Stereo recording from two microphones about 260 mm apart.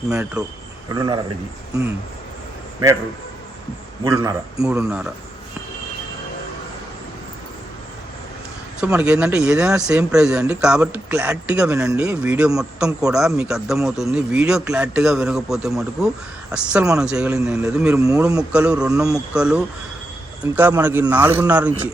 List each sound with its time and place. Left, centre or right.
0.1 s speech: centre
0.9 s a man's voice: centre
4.0 s a man's voice: centre
8.8 s a man's voice: centre